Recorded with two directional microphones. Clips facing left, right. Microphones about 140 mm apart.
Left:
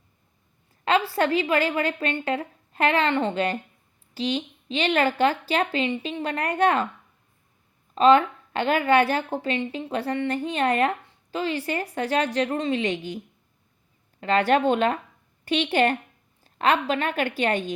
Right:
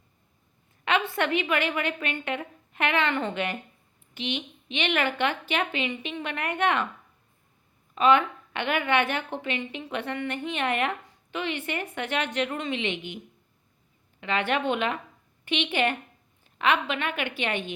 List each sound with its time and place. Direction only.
0.9 s a woman's voice: 35° left (ahead or behind)
7.9 s a woman's voice: 35° left (ahead or behind)
14.2 s a woman's voice: 40° left (ahead or behind)